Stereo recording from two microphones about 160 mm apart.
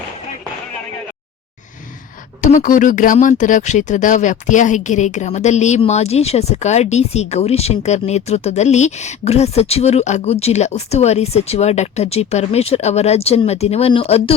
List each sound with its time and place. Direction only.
2.4 s speech: 55° left (ahead or behind); by 14.3 s 35° left (ahead or behind)